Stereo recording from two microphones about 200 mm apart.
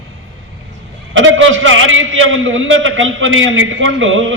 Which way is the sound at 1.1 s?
75° right (ahead or behind).